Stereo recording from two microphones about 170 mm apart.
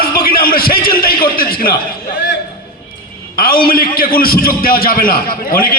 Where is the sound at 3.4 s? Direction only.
60° left (ahead or behind).